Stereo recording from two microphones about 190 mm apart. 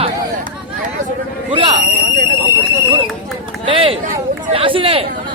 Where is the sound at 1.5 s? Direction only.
30° right (ahead or behind).